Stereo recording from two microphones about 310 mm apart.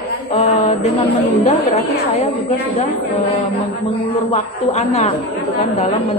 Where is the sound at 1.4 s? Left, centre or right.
Left.